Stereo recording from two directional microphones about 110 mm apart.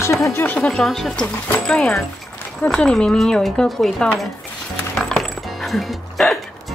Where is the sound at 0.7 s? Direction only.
5° left (ahead or behind).